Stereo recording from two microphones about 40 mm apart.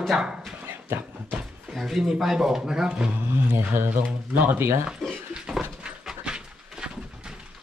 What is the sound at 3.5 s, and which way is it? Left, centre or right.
Speech, right.